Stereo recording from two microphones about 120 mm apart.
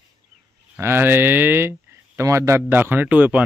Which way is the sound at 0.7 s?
20° right (ahead or behind).